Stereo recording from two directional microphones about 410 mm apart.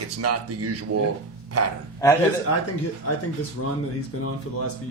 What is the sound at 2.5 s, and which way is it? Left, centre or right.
Speech, left.